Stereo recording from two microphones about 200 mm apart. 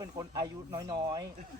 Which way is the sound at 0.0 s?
20° right (ahead or behind).